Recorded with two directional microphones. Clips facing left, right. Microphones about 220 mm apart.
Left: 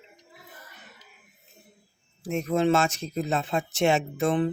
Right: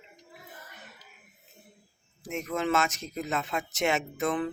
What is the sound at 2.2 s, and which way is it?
Speech, 30° left (ahead or behind).